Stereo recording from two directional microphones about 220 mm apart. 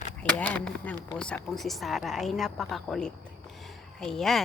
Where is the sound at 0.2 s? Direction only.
5° left (ahead or behind).